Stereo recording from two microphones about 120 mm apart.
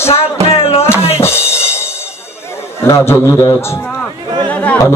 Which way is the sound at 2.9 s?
25° left (ahead or behind).